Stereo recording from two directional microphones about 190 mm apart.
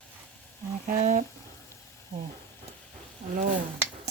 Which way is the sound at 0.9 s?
45° right (ahead or behind).